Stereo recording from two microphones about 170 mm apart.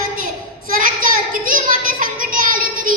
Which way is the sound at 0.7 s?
55° right (ahead or behind).